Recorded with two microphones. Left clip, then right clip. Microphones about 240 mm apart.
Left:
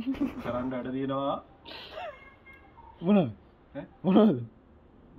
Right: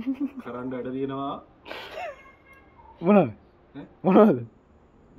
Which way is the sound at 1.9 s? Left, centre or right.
Right.